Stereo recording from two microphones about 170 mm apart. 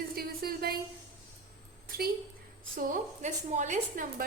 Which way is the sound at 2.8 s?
50° right (ahead or behind).